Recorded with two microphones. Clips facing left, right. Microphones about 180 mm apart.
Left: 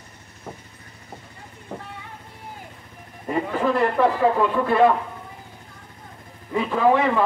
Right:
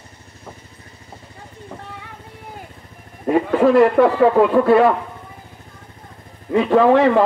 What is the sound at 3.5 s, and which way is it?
Speech, 70° right (ahead or behind).